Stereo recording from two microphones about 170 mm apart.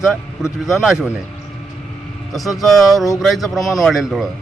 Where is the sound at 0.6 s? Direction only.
Centre (ahead or behind).